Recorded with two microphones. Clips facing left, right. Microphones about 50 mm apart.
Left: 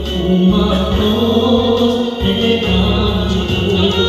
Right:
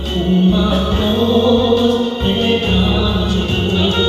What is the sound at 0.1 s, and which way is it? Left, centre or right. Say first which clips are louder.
Music: left 1 dB; centre.